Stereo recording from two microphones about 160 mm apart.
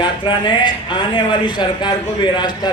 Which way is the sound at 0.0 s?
30° left (ahead or behind).